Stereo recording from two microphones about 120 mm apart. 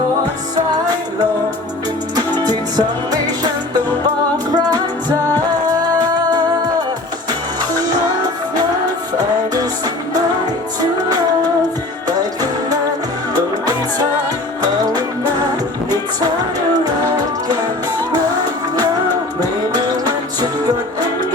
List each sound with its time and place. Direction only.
2.1 s music: 35° right (ahead or behind)
4.5 s music: 35° right (ahead or behind)
13.3 s music: 35° right (ahead or behind)
19.4 s music: 30° right (ahead or behind)